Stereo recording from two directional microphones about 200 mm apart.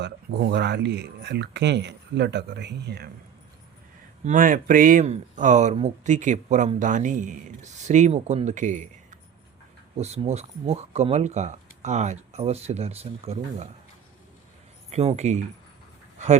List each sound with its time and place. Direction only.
0.0 s speech: 55° right (ahead or behind)
4.3 s speech: 40° right (ahead or behind)
14.8 s speech: 30° right (ahead or behind)